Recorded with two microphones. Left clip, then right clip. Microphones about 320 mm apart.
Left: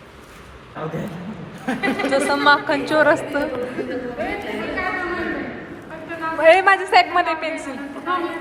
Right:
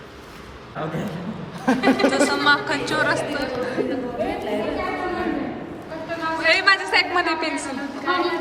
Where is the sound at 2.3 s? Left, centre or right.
Centre.